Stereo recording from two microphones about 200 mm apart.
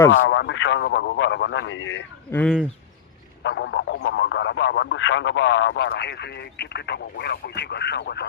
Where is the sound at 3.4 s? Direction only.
65° left (ahead or behind).